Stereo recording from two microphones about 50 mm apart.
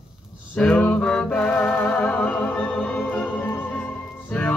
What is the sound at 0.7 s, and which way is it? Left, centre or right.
Music, left.